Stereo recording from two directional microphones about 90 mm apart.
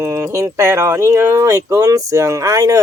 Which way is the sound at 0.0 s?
35° right (ahead or behind).